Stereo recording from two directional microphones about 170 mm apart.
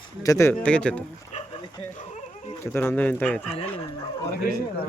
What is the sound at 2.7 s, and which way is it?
Speech, 10° left (ahead or behind).